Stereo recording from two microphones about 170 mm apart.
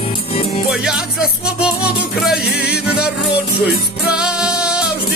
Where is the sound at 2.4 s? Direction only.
75° left (ahead or behind).